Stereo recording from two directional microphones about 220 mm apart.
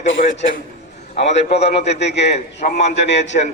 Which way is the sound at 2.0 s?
50° left (ahead or behind).